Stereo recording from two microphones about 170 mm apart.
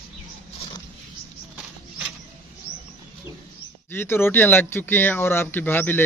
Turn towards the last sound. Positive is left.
turn(degrees=10)  # may be behind; listen again after turning